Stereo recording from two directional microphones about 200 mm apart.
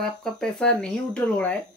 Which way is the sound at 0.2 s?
5° left (ahead or behind).